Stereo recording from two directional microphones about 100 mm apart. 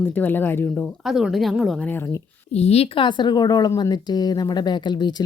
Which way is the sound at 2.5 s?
90° left.